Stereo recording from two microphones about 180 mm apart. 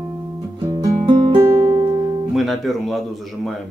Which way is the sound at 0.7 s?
25° right (ahead or behind).